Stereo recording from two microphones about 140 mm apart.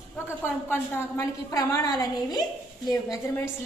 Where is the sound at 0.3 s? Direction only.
15° left (ahead or behind).